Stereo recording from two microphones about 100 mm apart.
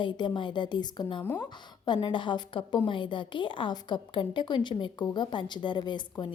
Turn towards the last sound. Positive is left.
turn(degrees=50)  # may be behind; listen again after turning